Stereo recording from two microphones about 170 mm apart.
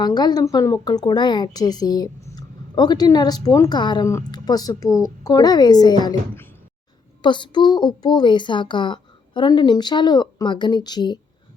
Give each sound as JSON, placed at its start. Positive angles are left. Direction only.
{"t": 0.0, "sound": "a woman's voice", "side_deg": 25}
{"t": 7.2, "sound": "a woman's voice", "side_deg": 30}